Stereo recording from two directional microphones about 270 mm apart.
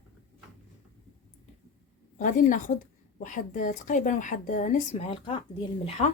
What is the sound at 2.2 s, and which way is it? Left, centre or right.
A woman's voice, left.